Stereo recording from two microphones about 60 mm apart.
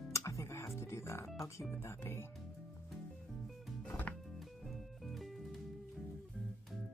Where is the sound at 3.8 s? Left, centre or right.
Left.